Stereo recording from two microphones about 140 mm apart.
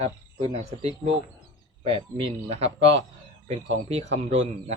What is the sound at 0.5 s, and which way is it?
Speech, 45° right (ahead or behind).